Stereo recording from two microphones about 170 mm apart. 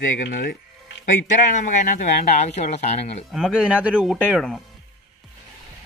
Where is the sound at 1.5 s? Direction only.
45° left (ahead or behind).